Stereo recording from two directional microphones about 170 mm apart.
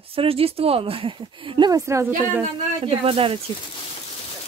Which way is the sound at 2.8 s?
35° right (ahead or behind).